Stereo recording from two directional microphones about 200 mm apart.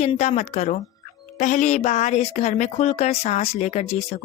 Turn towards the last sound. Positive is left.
turn(degrees=35)  # may be behind; listen again after turning